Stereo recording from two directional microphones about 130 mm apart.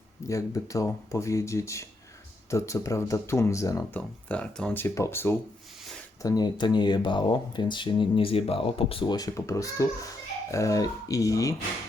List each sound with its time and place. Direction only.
0.3 s speech: 25° left (ahead or behind)
4.3 s speech: 10° left (ahead or behind)
6.2 s speech: 30° left (ahead or behind)